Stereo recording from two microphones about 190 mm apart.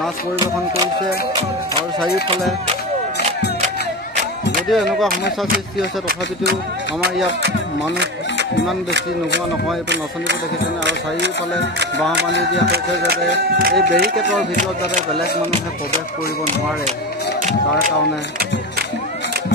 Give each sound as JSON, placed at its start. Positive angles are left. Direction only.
{"t": 2.7, "sound": "music", "side_deg": -30}
{"t": 4.6, "sound": "speech", "side_deg": 0}
{"t": 10.8, "sound": "speech", "side_deg": -65}
{"t": 12.3, "sound": "a sound", "side_deg": 70}
{"t": 13.0, "sound": "speech", "side_deg": -55}
{"t": 17.4, "sound": "music", "side_deg": -45}